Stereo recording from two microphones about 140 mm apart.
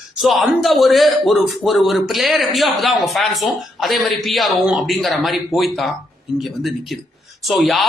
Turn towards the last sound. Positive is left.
turn(degrees=0)  # may be behind; listen again after turning